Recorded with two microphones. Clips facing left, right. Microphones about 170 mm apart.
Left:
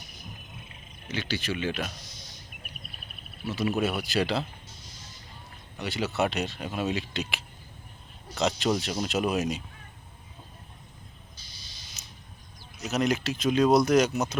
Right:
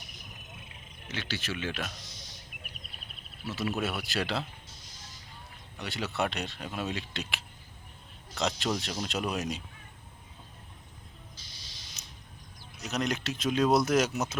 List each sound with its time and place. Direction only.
1.0 s speech: centre (ahead or behind)
3.4 s speech: centre (ahead or behind)
5.8 s speech: centre (ahead or behind)
12.0 s a sound: 15° right (ahead or behind)
12.8 s speech: 5° left (ahead or behind)